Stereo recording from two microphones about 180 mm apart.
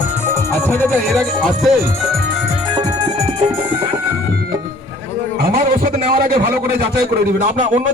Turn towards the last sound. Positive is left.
turn(degrees=-55)  # may be behind; listen again after turning